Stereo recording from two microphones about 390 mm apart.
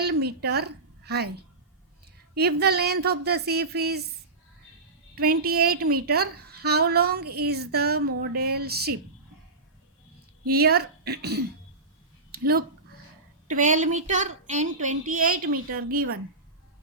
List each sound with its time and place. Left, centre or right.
0.0 s a woman's voice: right
5.1 s a woman's voice: right
10.4 s a woman's voice: right